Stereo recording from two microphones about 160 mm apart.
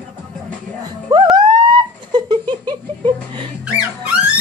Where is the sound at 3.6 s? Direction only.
5° right (ahead or behind).